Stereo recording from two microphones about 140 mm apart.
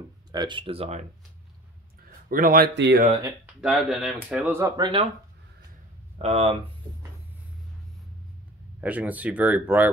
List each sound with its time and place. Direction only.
0.3 s speech: 35° right (ahead or behind); by 1.0 s 50° right (ahead or behind)
2.2 s speech: 90° right
3.6 s speech: centre (ahead or behind)
4.3 s speech: 15° right (ahead or behind)
4.6 s speech: 30° right (ahead or behind)
6.1 s speech: 45° right (ahead or behind)
8.8 s speech: 10° right (ahead or behind)